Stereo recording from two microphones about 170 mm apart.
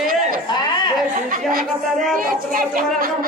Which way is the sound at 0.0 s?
55° right (ahead or behind).